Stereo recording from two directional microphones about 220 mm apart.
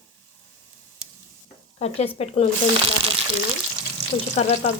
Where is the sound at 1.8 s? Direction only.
30° left (ahead or behind).